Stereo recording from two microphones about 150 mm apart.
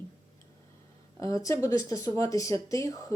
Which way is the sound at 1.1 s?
20° left (ahead or behind).